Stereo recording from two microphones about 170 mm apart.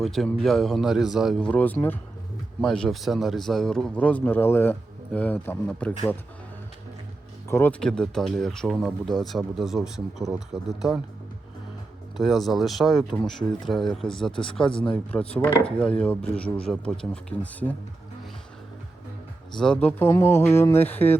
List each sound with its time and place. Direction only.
0.0 s a man's voice: centre (ahead or behind)
7.4 s a man's voice: 15° left (ahead or behind); by 11.0 s 5° right (ahead or behind)
12.1 s a man's voice: centre (ahead or behind)
14.6 s speech: 30° left (ahead or behind)
15.1 s speech: 10° left (ahead or behind)
19.5 s speech: 5° left (ahead or behind)